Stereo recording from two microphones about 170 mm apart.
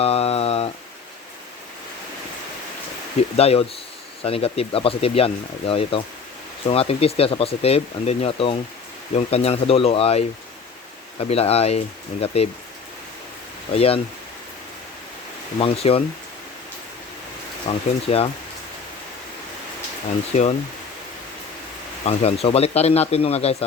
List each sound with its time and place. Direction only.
0.0 s a sound: 35° left (ahead or behind)
3.3 s speech: 35° left (ahead or behind)
13.7 s speech: 35° left (ahead or behind)
15.5 s speech: 35° left (ahead or behind)
17.7 s speech: 35° left (ahead or behind)
20.3 s speech: 45° left (ahead or behind)
22.0 s speech: 35° left (ahead or behind)